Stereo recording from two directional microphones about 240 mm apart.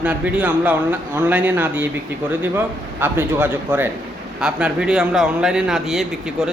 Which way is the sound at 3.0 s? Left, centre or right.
Centre.